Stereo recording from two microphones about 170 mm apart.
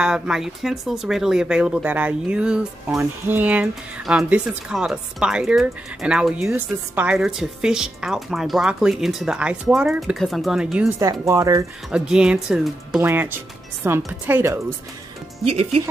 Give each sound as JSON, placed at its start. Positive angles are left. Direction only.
{"t": 0.0, "sound": "speech", "side_deg": -5}
{"t": 11.0, "sound": "speech", "side_deg": -20}
{"t": 11.9, "sound": "speech", "side_deg": -5}
{"t": 15.4, "sound": "speech", "side_deg": -35}